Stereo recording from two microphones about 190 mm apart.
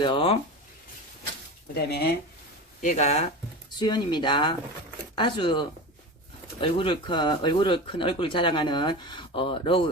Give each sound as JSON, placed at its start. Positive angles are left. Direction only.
{"t": 0.0, "sound": "speech", "side_deg": 25}
{"t": 1.7, "sound": "speech", "side_deg": 55}
{"t": 2.8, "sound": "speech", "side_deg": 35}
{"t": 3.8, "sound": "speech", "side_deg": 25}